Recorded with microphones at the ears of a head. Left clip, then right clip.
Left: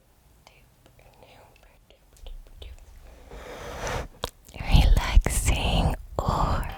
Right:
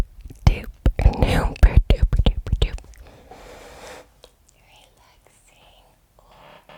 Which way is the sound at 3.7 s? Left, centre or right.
Left.